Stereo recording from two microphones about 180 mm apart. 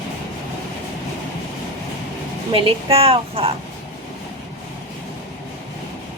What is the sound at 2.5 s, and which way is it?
Speech, 30° right (ahead or behind).